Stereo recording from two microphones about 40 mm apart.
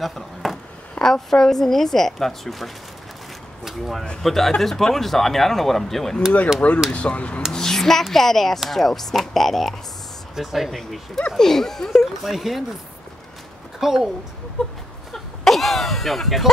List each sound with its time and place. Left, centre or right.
0.0 s speech: centre
1.0 s speech: centre
3.6 s speech: centre
4.2 s speech: centre
6.9 s speech: left
7.5 s speech: centre
10.3 s speech: centre
10.7 s speech: centre
12.2 s speech: centre
13.7 s speech: centre
14.6 s a sound: left
15.1 s speech: centre